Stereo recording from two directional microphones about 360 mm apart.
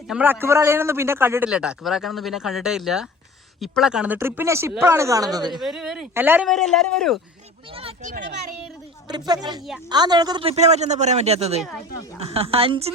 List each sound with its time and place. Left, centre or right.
0.1 s a man's voice: centre
5.5 s a man's voice: centre
7.7 s speech: centre
9.0 s speech: centre